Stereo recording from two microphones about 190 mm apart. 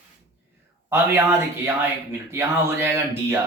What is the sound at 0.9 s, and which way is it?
Speech, 10° right (ahead or behind).